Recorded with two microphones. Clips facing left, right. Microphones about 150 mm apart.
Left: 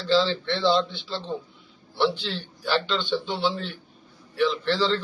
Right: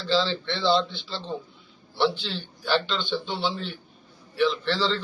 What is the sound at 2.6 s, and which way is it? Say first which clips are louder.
Speech: left 1 dB; 5° left (ahead or behind).